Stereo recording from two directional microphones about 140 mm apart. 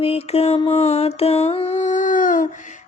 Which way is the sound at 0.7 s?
50° left (ahead or behind).